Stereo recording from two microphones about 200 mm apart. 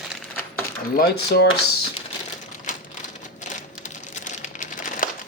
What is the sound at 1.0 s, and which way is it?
Speech, 50° left (ahead or behind).